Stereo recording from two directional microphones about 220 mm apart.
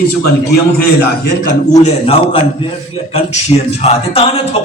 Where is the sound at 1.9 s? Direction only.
25° left (ahead or behind).